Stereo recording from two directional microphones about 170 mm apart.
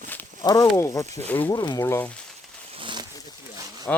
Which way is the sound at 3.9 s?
5° left (ahead or behind).